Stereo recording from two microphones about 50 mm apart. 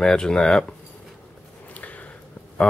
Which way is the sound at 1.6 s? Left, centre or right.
Left.